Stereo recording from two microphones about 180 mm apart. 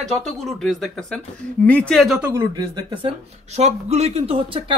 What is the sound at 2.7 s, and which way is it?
Speech, 30° right (ahead or behind).